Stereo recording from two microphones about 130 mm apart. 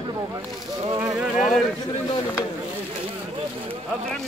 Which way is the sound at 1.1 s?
5° right (ahead or behind).